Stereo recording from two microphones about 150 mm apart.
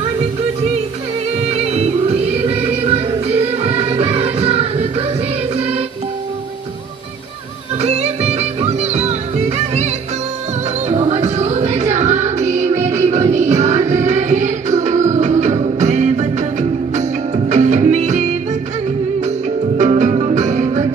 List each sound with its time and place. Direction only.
1.5 s music: 45° right (ahead or behind)
7.8 s music: 45° right (ahead or behind)
10.9 s music: 45° right (ahead or behind)
17.5 s music: 50° right (ahead or behind)
19.8 s music: 50° right (ahead or behind)